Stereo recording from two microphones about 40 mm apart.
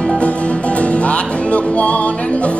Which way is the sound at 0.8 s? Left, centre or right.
Left.